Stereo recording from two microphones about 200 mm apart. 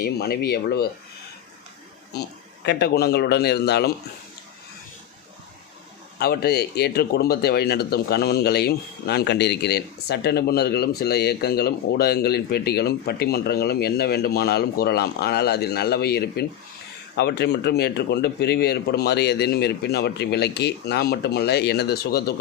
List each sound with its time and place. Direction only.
0.0 s speech: 50° left (ahead or behind)
2.6 s a man's voice: 55° left (ahead or behind)
6.1 s a man's voice: 50° left (ahead or behind)